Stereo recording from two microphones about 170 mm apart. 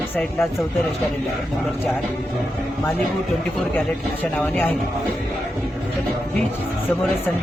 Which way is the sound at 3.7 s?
10° left (ahead or behind).